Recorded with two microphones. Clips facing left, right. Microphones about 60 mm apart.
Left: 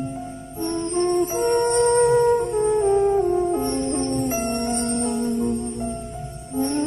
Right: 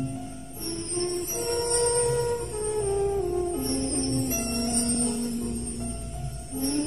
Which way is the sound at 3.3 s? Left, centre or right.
Left.